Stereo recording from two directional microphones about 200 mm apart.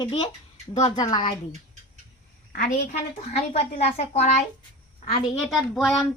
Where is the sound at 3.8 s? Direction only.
30° left (ahead or behind).